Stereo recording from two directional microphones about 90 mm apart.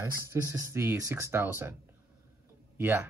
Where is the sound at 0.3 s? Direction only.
30° right (ahead or behind).